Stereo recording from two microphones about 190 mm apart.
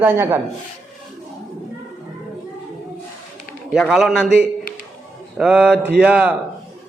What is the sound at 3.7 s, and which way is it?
A man's voice, centre (ahead or behind).